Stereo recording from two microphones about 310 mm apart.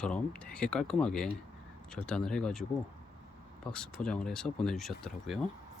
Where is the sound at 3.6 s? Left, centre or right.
Centre.